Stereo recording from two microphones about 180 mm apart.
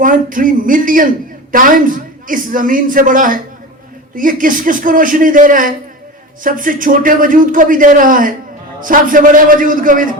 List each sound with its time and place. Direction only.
0.0 s a man's voice: 50° right (ahead or behind)